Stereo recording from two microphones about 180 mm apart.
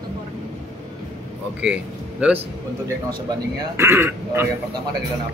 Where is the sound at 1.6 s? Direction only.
5° right (ahead or behind).